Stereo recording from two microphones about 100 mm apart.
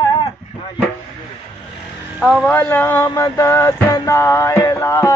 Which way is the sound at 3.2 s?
30° left (ahead or behind).